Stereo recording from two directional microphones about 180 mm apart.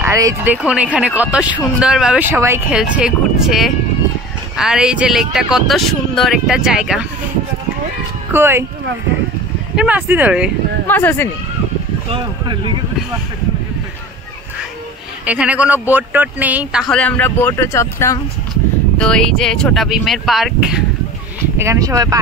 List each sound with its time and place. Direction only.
0.0 s speech: 15° right (ahead or behind)
8.3 s speech: 15° right (ahead or behind)
9.8 s speech: 10° right (ahead or behind)
10.9 s speech: 10° left (ahead or behind)
12.1 s speech: 25° right (ahead or behind)
15.2 s speech: 5° right (ahead or behind)
16.9 s speech: 5° left (ahead or behind)
18.9 s speech: 5° left (ahead or behind)
21.5 s speech: 15° right (ahead or behind)